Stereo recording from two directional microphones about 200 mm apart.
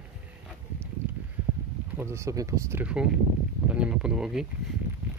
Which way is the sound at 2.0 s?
15° right (ahead or behind).